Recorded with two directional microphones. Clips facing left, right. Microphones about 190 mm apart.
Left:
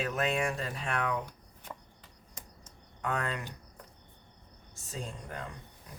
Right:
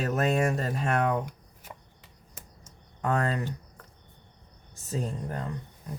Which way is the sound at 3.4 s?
15° left (ahead or behind).